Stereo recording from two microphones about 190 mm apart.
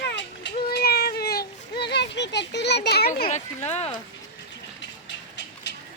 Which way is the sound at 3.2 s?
35° left (ahead or behind).